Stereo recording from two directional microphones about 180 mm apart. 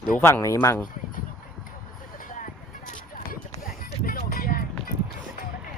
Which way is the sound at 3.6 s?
50° left (ahead or behind).